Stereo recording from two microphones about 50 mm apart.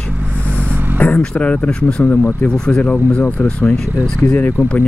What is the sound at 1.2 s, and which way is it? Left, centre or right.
Speech, left.